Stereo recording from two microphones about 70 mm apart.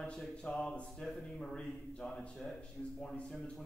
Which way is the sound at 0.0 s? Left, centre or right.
Centre.